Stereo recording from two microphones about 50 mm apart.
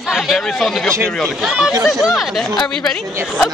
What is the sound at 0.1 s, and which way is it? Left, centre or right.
Speech, centre.